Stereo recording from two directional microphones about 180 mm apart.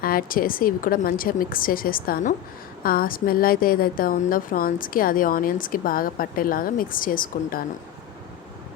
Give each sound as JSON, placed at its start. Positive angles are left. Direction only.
{"t": 0.0, "sound": "a woman's voice", "side_deg": 55}